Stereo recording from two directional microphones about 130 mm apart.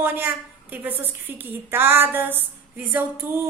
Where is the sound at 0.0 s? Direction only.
15° right (ahead or behind).